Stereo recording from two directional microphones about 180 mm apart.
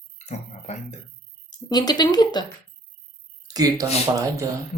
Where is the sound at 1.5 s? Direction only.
20° left (ahead or behind).